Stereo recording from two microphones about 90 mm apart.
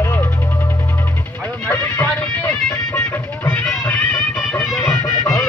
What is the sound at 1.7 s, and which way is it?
Music, 20° left (ahead or behind).